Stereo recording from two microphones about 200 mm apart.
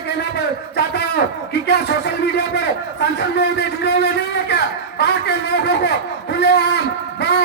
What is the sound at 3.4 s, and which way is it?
Speech, 55° left (ahead or behind).